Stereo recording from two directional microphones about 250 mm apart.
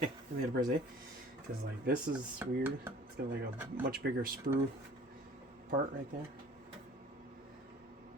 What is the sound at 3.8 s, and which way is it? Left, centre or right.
Speech, right.